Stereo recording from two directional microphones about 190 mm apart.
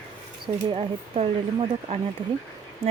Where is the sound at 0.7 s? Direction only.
30° right (ahead or behind).